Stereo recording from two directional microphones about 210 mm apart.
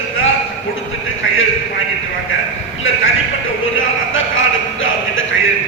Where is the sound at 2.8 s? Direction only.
70° left (ahead or behind).